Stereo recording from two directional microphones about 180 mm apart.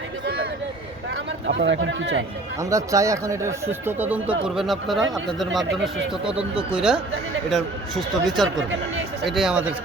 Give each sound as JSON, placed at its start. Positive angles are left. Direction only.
{"t": 1.1, "sound": "speech", "side_deg": -90}
{"t": 2.6, "sound": "speech", "side_deg": -20}
{"t": 6.2, "sound": "speech", "side_deg": -5}
{"t": 8.4, "sound": "speech", "side_deg": -90}
{"t": 9.2, "sound": "speech", "side_deg": 0}